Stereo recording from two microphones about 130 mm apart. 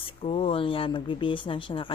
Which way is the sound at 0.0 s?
45° left (ahead or behind).